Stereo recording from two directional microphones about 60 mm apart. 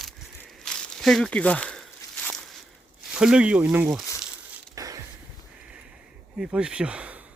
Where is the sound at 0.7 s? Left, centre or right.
Centre.